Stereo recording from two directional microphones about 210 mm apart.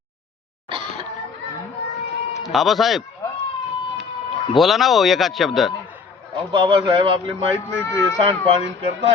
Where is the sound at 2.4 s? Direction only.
Centre (ahead or behind).